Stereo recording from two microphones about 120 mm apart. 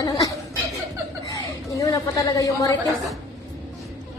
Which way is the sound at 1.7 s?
30° left (ahead or behind).